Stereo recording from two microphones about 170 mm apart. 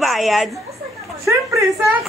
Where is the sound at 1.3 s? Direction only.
20° right (ahead or behind).